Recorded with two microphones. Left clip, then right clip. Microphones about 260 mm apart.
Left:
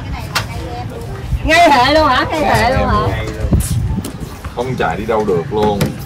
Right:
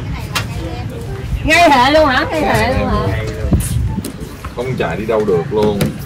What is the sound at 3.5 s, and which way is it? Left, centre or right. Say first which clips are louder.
Vehicle: even; left.